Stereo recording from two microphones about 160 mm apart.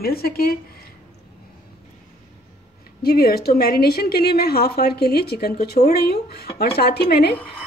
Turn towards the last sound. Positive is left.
turn(degrees=90)